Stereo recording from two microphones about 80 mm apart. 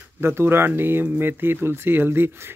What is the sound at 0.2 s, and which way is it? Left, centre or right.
Speech, right.